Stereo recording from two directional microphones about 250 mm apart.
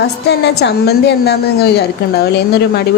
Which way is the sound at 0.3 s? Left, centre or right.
Left.